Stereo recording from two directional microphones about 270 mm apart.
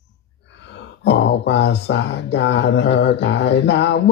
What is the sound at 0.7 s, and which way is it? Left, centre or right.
Speech, left.